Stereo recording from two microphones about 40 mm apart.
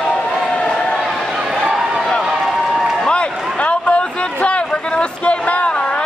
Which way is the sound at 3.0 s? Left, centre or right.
Left.